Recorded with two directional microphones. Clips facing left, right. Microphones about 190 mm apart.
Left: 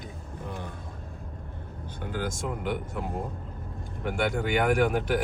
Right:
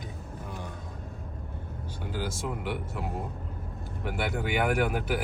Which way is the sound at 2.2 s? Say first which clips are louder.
Left 2 dB; 5° right (ahead or behind).